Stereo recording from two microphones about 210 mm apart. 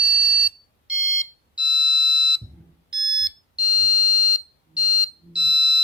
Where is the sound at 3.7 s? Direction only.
5° right (ahead or behind).